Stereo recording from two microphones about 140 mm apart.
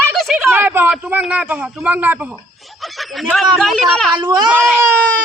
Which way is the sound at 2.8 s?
Centre (ahead or behind).